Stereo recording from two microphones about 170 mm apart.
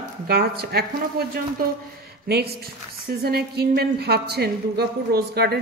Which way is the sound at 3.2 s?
65° right (ahead or behind).